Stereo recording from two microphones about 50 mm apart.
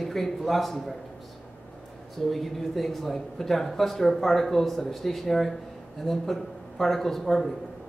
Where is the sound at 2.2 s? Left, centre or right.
Centre.